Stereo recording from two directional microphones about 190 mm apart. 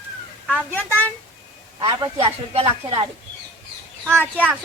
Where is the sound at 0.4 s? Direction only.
5° left (ahead or behind).